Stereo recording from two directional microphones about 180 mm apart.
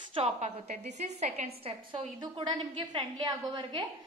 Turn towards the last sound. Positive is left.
turn(degrees=-25)  # may be behind; listen again after turning